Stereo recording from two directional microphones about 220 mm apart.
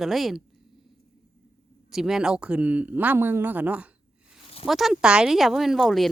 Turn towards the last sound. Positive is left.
turn(degrees=0)  # may be behind; listen again after turning